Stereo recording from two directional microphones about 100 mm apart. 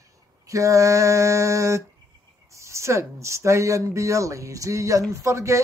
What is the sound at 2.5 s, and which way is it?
Speech, 30° right (ahead or behind).